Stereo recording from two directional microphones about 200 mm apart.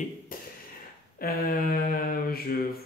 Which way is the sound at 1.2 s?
45° left (ahead or behind).